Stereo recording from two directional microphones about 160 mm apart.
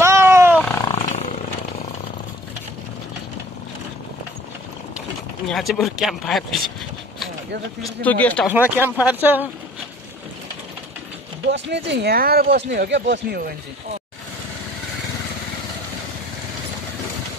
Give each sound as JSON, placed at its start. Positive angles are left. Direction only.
{"t": 0.0, "sound": "wild animals", "side_deg": -15}
{"t": 0.9, "sound": "wild animals", "side_deg": 45}
{"t": 5.5, "sound": "speech", "side_deg": 0}
{"t": 8.0, "sound": "speech", "side_deg": 10}
{"t": 8.5, "sound": "speech", "side_deg": -10}
{"t": 11.4, "sound": "speech", "side_deg": -90}